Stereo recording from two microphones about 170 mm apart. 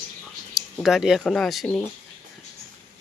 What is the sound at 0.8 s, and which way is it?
Speech, centre (ahead or behind).